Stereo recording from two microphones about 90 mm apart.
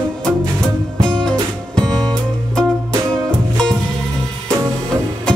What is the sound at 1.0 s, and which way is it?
Music, 10° left (ahead or behind).